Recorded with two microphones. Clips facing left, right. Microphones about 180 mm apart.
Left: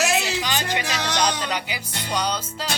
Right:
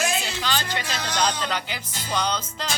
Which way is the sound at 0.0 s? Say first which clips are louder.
Left 4 dB; 70° left (ahead or behind).